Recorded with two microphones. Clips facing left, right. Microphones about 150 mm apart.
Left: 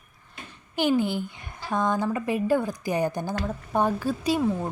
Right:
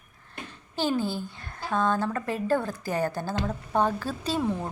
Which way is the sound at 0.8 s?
15° left (ahead or behind).